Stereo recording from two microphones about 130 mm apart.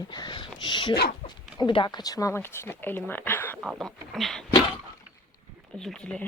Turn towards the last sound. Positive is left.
turn(degrees=5)  # may be behind; listen again after turning